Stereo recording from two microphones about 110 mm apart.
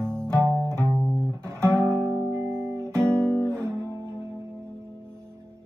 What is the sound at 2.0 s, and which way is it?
Music, 25° right (ahead or behind).